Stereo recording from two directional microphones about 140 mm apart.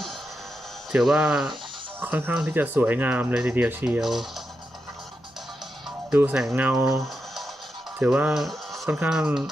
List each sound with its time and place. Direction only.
0.9 s speech: 5° right (ahead or behind)
6.1 s speech: 10° right (ahead or behind)
7.9 s speech: 10° right (ahead or behind)